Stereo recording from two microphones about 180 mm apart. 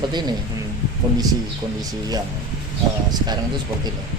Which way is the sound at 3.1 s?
25° right (ahead or behind).